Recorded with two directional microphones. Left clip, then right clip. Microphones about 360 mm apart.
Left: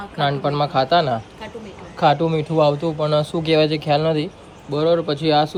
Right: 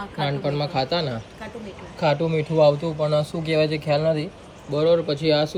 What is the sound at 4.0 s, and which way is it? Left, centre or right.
Speech, left.